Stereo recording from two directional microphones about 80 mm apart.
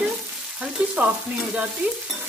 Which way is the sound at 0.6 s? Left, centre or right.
Centre.